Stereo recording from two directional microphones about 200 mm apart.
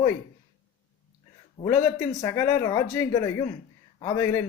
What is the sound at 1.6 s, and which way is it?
Speech, 15° left (ahead or behind).